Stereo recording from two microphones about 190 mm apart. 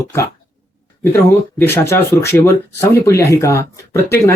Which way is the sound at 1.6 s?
10° left (ahead or behind).